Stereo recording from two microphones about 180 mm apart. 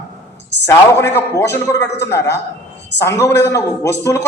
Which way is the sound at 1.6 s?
15° left (ahead or behind).